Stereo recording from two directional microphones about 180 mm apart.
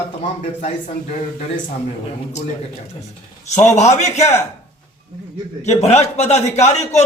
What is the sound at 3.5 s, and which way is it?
Speech, 40° left (ahead or behind).